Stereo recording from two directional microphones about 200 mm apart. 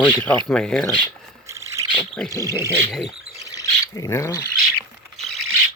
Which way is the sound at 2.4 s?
15° right (ahead or behind).